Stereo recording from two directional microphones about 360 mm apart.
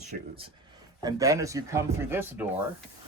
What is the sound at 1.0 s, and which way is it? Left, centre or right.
A man's voice, centre.